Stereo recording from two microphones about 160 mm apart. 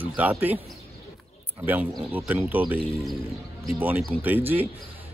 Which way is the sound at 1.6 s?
10° right (ahead or behind).